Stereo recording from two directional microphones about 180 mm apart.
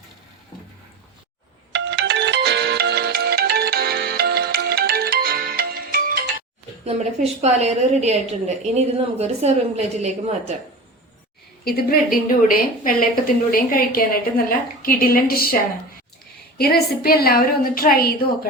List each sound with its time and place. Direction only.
1.7 s ringtone: 75° right (ahead or behind); by 6.2 s 55° right (ahead or behind)
6.8 s a woman's voice: 35° right (ahead or behind)
11.6 s a woman's voice: 55° left (ahead or behind)
16.6 s a woman's voice: 60° left (ahead or behind)